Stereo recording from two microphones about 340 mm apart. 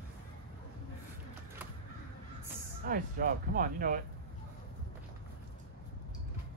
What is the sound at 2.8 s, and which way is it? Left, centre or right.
Speech, right.